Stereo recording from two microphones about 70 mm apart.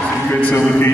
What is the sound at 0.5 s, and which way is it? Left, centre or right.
Mantra, left.